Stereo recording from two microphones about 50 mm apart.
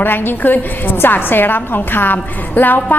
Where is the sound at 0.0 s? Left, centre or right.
Left.